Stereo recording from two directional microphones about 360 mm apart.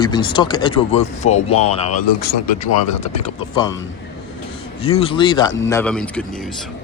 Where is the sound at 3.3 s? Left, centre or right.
Centre.